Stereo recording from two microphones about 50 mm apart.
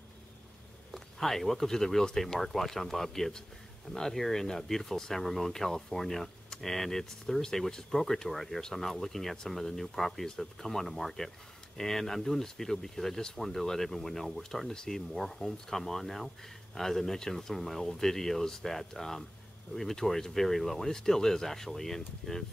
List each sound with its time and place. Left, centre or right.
0.9 s speech: centre